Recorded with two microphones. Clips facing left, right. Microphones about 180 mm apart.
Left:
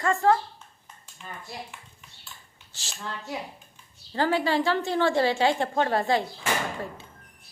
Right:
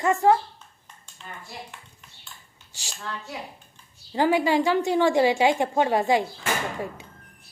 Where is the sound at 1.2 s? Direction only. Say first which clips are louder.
Even; 5° left (ahead or behind).